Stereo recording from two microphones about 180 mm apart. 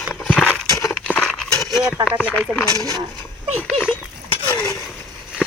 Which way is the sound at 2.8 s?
20° right (ahead or behind).